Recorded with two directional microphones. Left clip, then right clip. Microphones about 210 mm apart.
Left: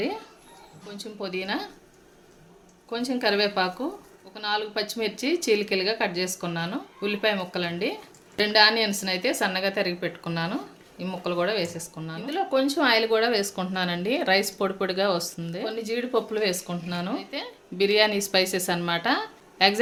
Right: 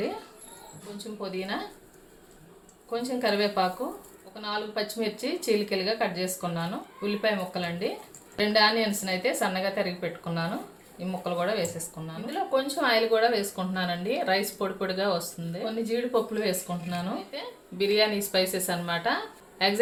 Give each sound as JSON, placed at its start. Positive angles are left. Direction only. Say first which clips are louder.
{"t": 0.9, "sound": "speech", "louder": "left 3 dB", "side_deg": 55}
{"t": 2.9, "sound": "a woman's voice", "louder": "left 2 dB", "side_deg": 55}